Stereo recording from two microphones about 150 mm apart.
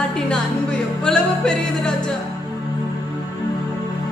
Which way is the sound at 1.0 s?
5° left (ahead or behind).